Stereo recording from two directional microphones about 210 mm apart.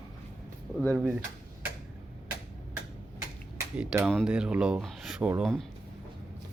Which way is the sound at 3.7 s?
5° right (ahead or behind).